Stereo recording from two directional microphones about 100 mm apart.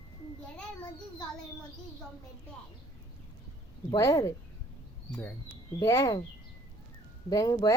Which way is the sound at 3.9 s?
30° left (ahead or behind).